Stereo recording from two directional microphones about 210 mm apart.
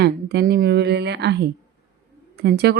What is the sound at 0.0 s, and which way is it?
A woman's voice, 50° right (ahead or behind).